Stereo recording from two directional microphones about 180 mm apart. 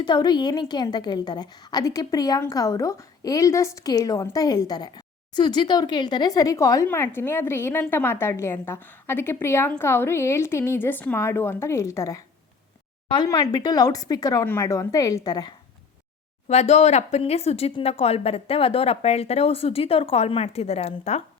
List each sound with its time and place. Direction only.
0.0 s a woman's voice: 25° left (ahead or behind)
16.5 s speech: 35° left (ahead or behind)